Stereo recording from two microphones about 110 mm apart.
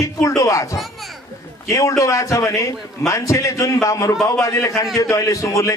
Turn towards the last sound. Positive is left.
turn(degrees=30)  # may be behind; listen again after turning